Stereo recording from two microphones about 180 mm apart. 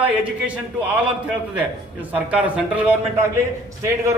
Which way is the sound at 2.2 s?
5° right (ahead or behind).